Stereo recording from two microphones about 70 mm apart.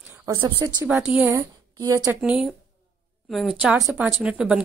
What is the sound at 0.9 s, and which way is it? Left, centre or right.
Speech, centre.